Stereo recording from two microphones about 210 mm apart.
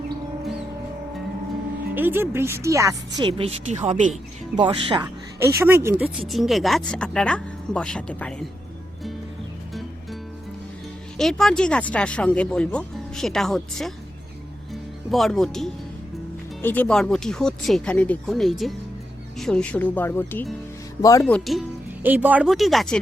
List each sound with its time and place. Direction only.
2.0 s speech: 10° right (ahead or behind); by 4.1 s 35° right (ahead or behind)
4.5 s speech: 25° right (ahead or behind)
5.5 s speech: 10° right (ahead or behind); by 8.4 s 5° left (ahead or behind)
11.2 s speech: centre (ahead or behind)
22.0 s speech: 10° right (ahead or behind)